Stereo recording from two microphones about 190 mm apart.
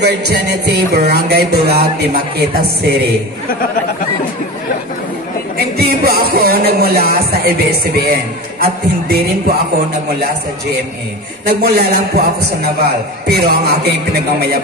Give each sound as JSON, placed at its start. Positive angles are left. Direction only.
{"t": 0.0, "sound": "music", "side_deg": -60}
{"t": 5.8, "sound": "music", "side_deg": -55}
{"t": 11.4, "sound": "music", "side_deg": -55}
{"t": 13.3, "sound": "music", "side_deg": -55}